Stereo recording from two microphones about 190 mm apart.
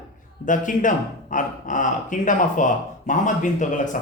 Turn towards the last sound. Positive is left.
turn(degrees=40)  # may be behind; listen again after turning